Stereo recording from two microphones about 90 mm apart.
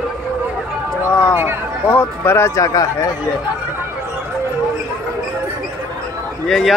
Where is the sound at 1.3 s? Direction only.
25° right (ahead or behind).